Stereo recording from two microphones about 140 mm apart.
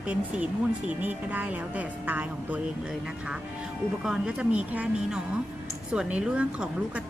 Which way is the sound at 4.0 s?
5° right (ahead or behind).